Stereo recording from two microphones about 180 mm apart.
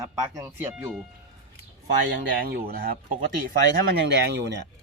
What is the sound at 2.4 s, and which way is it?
Speech, 55° right (ahead or behind).